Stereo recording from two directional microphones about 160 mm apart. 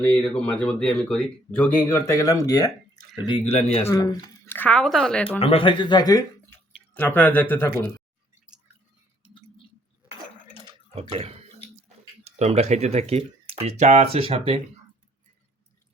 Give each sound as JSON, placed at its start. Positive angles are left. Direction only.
{"t": 0.0, "sound": "speech", "side_deg": 10}
{"t": 3.2, "sound": "speech", "side_deg": 35}
{"t": 3.8, "sound": "speech", "side_deg": 20}
{"t": 4.5, "sound": "speech", "side_deg": 10}
{"t": 5.4, "sound": "speech", "side_deg": 35}
{"t": 6.9, "sound": "speech", "side_deg": 10}
{"t": 8.4, "sound": "chewing", "side_deg": -5}
{"t": 10.9, "sound": "a sound", "side_deg": -40}
{"t": 12.2, "sound": "speech", "side_deg": -40}